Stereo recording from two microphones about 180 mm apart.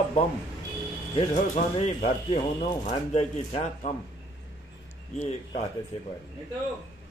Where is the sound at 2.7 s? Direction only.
35° left (ahead or behind).